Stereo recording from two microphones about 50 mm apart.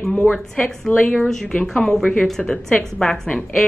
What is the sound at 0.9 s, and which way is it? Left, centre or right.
Speech, left.